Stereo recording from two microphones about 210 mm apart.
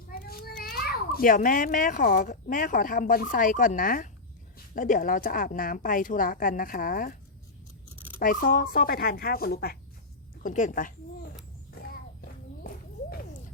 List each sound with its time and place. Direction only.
0.1 s children playing: 45° left (ahead or behind)
0.6 s a child's voice: 45° left (ahead or behind)
8.2 s speech: 40° left (ahead or behind)
12.6 s a sound: 45° left (ahead or behind)